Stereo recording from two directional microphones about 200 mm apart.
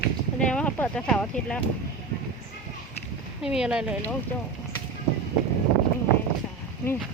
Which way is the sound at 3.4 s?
5° right (ahead or behind).